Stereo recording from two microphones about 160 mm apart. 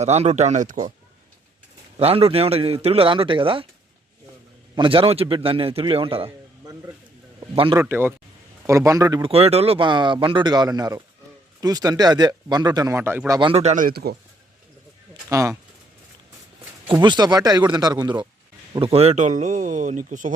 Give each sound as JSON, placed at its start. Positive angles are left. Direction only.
{"t": 0.0, "sound": "speech", "side_deg": -45}
{"t": 2.0, "sound": "a man's voice", "side_deg": -40}
{"t": 4.7, "sound": "a man's voice", "side_deg": -35}
{"t": 7.3, "sound": "speech", "side_deg": -30}
{"t": 7.8, "sound": "speech", "side_deg": -15}
{"t": 9.3, "sound": "a man's voice", "side_deg": -40}
{"t": 13.5, "sound": "speech", "side_deg": -45}
{"t": 13.8, "sound": "speech", "side_deg": -75}
{"t": 15.3, "sound": "speech", "side_deg": -20}
{"t": 16.9, "sound": "speech", "side_deg": -30}
{"t": 18.7, "sound": "speech", "side_deg": -35}